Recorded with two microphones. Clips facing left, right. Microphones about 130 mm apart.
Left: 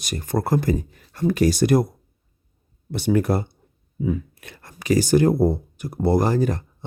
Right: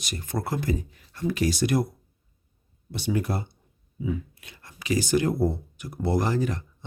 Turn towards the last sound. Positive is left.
turn(degrees=40)  # may be behind; listen again after turning